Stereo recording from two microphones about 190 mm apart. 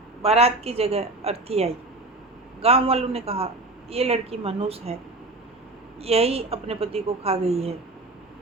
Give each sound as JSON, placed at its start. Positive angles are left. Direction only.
{"t": 0.2, "sound": "a man's voice", "side_deg": -30}
{"t": 6.0, "sound": "a man's voice", "side_deg": -30}